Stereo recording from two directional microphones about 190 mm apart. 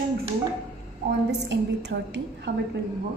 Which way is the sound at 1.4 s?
70° right (ahead or behind).